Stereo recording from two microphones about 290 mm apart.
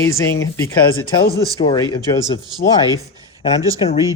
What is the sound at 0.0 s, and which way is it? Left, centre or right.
Speech, centre.